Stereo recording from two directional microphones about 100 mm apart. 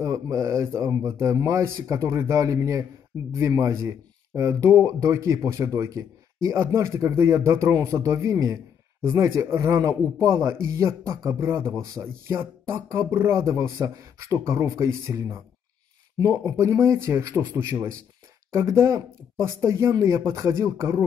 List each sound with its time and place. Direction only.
0.0 s speech: 35° right (ahead or behind)